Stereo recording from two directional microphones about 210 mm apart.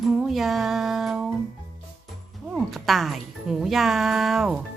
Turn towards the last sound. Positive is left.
turn(degrees=-5)  # may be behind; listen again after turning